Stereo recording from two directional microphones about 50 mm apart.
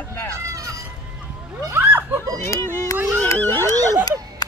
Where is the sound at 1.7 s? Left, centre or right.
Right.